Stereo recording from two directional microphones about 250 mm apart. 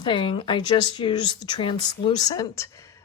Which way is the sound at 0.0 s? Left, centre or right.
Centre.